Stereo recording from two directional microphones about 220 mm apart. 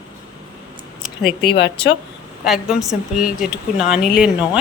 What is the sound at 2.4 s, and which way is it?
A woman's voice, centre (ahead or behind).